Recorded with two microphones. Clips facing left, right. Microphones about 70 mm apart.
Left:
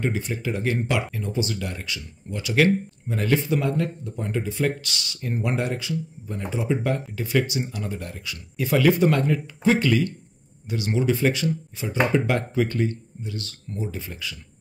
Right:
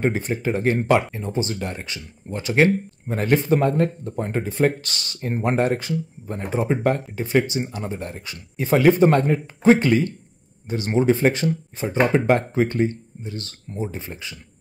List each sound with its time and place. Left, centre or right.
0.0 s speech: right
7.2 s speech: right